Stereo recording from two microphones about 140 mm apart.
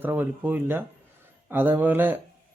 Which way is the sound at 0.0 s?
15° right (ahead or behind).